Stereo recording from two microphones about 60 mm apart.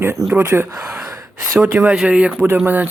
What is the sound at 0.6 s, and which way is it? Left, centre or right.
Gasp, right.